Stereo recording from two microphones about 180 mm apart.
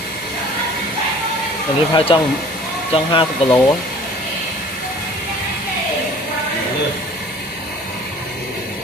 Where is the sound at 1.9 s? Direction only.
30° left (ahead or behind).